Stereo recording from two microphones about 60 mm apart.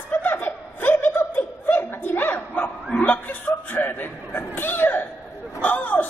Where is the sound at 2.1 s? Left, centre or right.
Left.